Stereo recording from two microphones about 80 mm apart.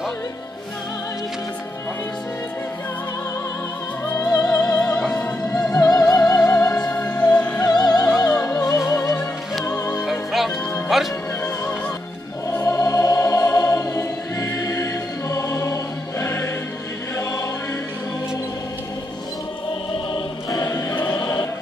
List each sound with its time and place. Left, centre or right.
4.1 s music: left
4.7 s music: centre
5.7 s music: left
6.7 s music: centre
7.6 s music: left
8.2 s music: left
10.0 s music: centre
12.6 s music: left
20.6 s music: left